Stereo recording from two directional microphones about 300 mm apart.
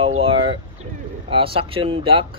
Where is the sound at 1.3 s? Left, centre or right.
Centre.